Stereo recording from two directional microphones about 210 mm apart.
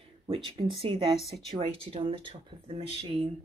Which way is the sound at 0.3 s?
25° right (ahead or behind).